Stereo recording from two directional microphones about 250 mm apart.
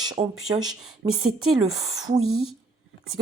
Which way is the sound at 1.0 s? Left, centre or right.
Right.